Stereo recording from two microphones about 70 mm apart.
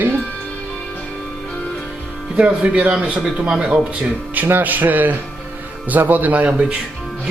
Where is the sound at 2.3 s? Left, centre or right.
Centre.